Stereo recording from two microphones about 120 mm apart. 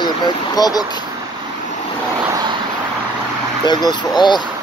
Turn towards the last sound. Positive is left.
turn(degrees=35)  # may be behind; listen again after turning